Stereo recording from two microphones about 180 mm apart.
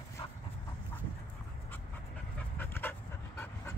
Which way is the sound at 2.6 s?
10° left (ahead or behind).